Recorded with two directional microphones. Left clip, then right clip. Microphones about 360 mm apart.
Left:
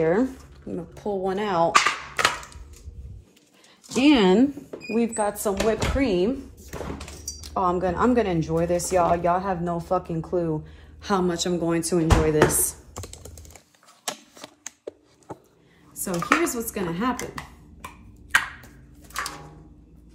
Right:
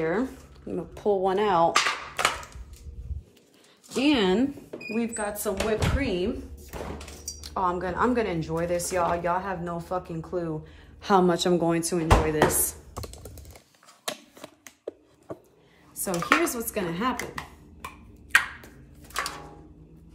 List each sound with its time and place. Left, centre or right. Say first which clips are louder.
0.0 s speech: left 5 dB; centre
0.7 s speech: right 4 dB; centre
1.7 s cap gun: left 4 dB; centre
3.9 s a woman's voice: left 5 dB; centre
5.5 s a woman's voice: left 3 dB; left
7.5 s a woman's voice: left 3 dB; centre
11.0 s speech: right 3 dB; centre
15.9 s dishes: left 1 dB; centre
16.9 s a sound: left 1 dB; centre